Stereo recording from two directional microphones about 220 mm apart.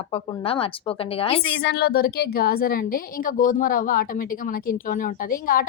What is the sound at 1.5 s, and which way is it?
A woman's voice, 50° left (ahead or behind).